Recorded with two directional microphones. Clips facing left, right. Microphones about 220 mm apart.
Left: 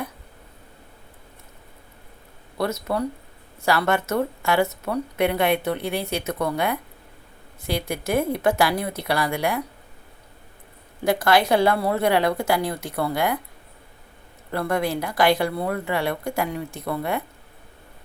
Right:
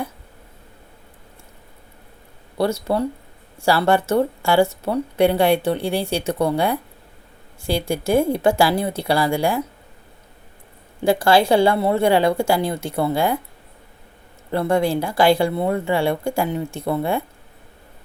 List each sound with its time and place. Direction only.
2.6 s speech: 30° right (ahead or behind)
11.0 s speech: 30° right (ahead or behind)
14.5 s speech: 25° right (ahead or behind)